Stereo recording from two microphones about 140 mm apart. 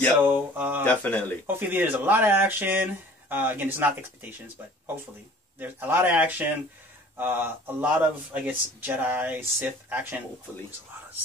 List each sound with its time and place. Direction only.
0.1 s speech: 15° right (ahead or behind)
0.8 s speech: 10° left (ahead or behind)
1.5 s speech: 15° right (ahead or behind)
5.6 s speech: 15° right (ahead or behind)